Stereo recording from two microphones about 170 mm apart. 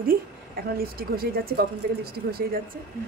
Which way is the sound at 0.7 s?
60° right (ahead or behind).